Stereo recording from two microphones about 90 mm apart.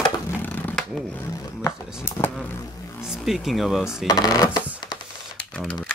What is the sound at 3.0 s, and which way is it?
Speech, centre (ahead or behind).